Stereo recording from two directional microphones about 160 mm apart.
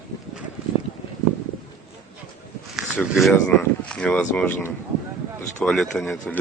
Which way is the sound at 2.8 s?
Centre (ahead or behind).